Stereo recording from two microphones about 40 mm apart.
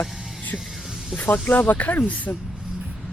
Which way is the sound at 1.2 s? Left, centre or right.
Left.